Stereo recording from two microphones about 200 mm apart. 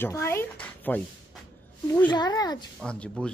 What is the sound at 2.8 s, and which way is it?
Speech, 5° left (ahead or behind).